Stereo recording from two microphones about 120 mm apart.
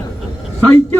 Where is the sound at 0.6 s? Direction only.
15° left (ahead or behind).